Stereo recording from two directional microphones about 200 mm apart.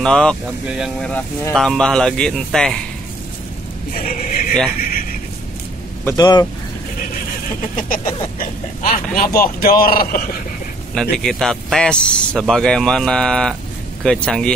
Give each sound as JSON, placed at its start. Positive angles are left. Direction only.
{"t": 0.0, "sound": "speech", "side_deg": 5}
{"t": 3.9, "sound": "a sound", "side_deg": 45}
{"t": 4.7, "sound": "speech", "side_deg": 45}
{"t": 6.0, "sound": "speech", "side_deg": 20}
{"t": 7.6, "sound": "speech", "side_deg": 40}
{"t": 11.0, "sound": "speech", "side_deg": 0}